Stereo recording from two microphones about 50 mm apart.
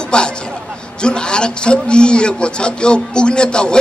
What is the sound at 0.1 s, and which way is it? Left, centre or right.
A man's voice, centre.